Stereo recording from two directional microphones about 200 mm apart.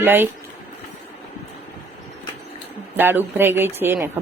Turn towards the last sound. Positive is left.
turn(degrees=-10)  # may be behind; listen again after turning